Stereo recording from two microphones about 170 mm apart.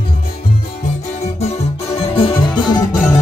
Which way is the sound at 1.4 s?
35° left (ahead or behind).